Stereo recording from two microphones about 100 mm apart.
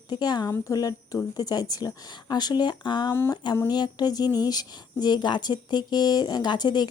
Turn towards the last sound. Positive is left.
turn(degrees=45)  # may be behind; listen again after turning